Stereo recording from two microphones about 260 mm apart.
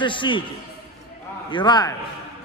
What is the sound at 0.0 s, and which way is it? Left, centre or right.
Speech, centre.